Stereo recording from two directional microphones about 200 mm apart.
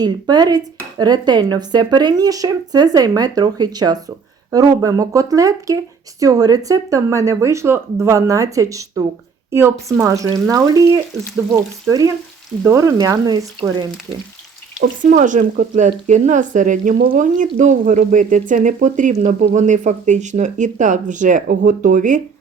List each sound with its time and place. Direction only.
0.0 s speech: 20° right (ahead or behind)
14.8 s speech: 40° right (ahead or behind)